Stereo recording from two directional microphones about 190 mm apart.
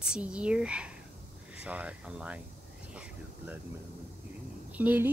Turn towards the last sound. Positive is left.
turn(degrees=-10)  # may be behind; listen again after turning